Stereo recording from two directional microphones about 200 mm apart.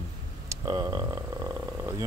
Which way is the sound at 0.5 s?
20° right (ahead or behind).